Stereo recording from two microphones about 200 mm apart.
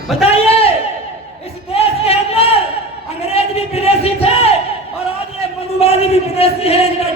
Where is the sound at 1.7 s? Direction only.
30° left (ahead or behind).